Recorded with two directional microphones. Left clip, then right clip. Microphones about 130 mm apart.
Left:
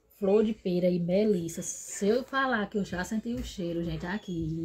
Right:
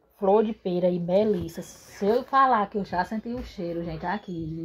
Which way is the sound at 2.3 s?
45° right (ahead or behind).